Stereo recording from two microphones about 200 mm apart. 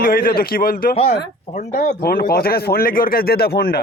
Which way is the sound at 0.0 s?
45° left (ahead or behind).